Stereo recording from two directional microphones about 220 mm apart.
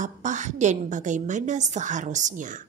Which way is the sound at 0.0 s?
35° right (ahead or behind).